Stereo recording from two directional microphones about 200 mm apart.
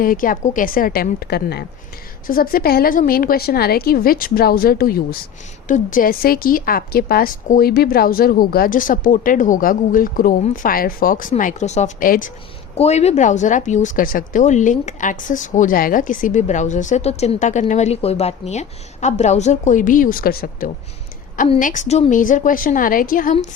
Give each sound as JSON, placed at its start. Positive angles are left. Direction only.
{"t": 0.0, "sound": "a woman's voice", "side_deg": 45}
{"t": 12.7, "sound": "speech", "side_deg": 30}